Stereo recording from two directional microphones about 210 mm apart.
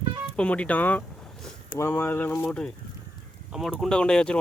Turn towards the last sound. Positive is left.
turn(degrees=5)  # may be behind; listen again after turning